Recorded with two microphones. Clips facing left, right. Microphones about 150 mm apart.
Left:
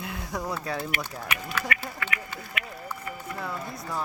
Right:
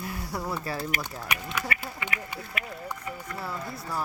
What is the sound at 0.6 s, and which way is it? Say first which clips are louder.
Speech: left 1 dB; centre (ahead or behind).